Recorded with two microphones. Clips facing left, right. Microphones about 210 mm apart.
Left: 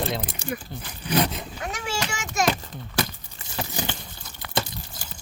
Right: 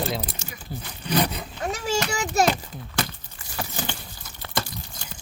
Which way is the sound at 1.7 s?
35° right (ahead or behind).